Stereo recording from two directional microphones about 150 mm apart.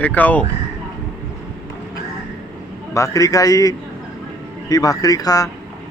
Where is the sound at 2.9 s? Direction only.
20° left (ahead or behind).